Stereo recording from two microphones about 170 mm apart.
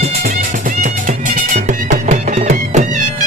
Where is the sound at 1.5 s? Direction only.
45° right (ahead or behind).